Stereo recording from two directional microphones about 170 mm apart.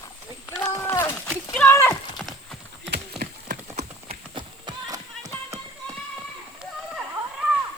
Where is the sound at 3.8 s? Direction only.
30° right (ahead or behind).